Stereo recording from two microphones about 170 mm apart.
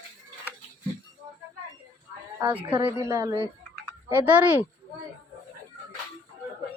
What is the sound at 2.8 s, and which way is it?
Speech, 20° right (ahead or behind).